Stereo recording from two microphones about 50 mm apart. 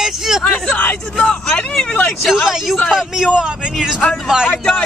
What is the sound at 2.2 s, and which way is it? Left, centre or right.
Speech, centre.